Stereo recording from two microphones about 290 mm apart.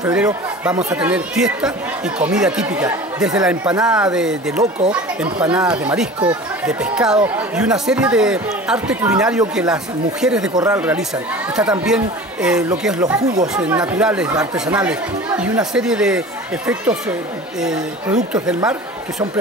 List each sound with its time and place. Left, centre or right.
0.0 s speech: centre
18.6 s speech: centre